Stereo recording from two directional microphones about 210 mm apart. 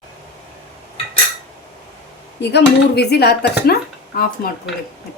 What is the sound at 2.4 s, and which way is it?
Speech, 50° left (ahead or behind).